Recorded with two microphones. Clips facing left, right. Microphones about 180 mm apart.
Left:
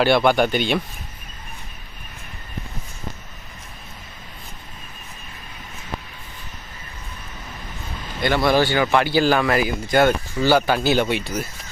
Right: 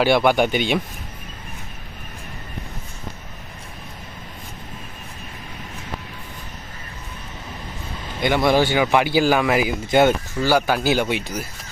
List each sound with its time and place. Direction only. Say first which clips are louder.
0.0 s speech: even; 10° right (ahead or behind)
8.2 s speech: right 1 dB; 20° right (ahead or behind)
10.3 s speech: left 1 dB; 5° right (ahead or behind)